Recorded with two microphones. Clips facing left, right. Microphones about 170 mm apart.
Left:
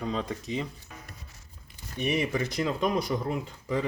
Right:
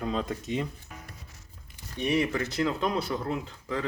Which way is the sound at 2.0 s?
10° left (ahead or behind).